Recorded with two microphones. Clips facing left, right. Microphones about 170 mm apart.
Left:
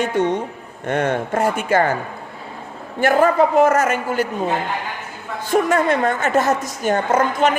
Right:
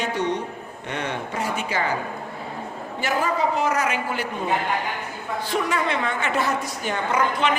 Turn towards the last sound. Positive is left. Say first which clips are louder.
# left 5 dB
turn(degrees=45)  # may be behind; listen again after turning